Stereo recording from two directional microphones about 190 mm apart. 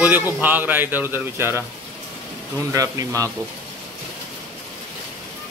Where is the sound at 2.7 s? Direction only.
15° right (ahead or behind).